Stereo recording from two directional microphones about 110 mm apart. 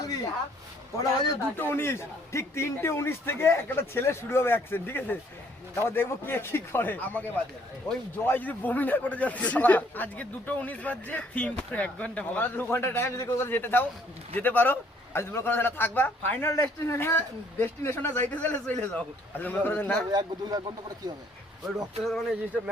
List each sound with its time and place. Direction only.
0.9 s a man's voice: 35° left (ahead or behind)
1.5 s a man's voice: 20° left (ahead or behind)
20.1 s speech: 40° right (ahead or behind)
21.8 s speech: centre (ahead or behind)